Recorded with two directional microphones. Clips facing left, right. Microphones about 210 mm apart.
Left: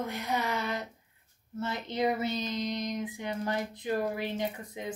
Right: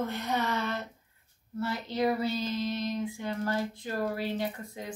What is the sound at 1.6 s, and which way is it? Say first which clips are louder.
Female singing: right 1 dB; 20° left (ahead or behind).